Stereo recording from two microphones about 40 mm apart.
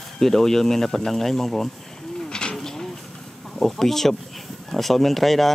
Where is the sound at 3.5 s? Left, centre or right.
Centre.